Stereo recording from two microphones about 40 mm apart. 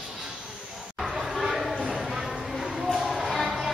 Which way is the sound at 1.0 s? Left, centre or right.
Centre.